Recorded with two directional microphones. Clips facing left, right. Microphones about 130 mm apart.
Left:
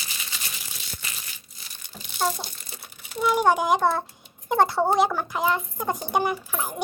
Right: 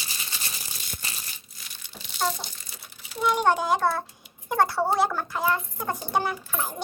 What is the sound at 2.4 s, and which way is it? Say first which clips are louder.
Crumpling: left 2 dB; 50° left (ahead or behind).